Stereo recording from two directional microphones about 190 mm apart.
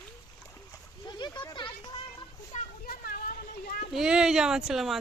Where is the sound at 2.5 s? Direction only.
50° left (ahead or behind).